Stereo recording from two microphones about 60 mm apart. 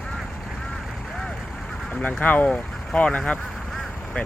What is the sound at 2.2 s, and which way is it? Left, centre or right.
Speech, left.